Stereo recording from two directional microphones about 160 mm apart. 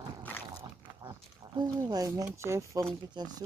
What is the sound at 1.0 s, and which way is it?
Speech, 30° right (ahead or behind).